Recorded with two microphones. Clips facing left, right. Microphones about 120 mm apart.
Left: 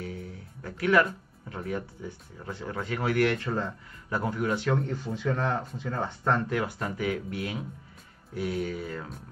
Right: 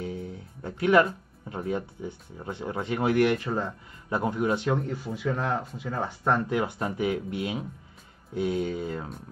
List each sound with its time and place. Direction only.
0.0 s speech: 25° right (ahead or behind)
4.7 s speech: 5° right (ahead or behind); by 9.1 s 25° right (ahead or behind)